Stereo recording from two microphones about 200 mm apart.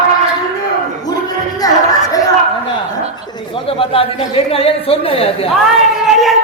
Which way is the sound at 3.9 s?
30° left (ahead or behind).